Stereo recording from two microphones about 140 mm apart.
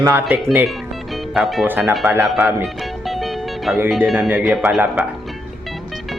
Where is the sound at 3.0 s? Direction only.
Centre (ahead or behind).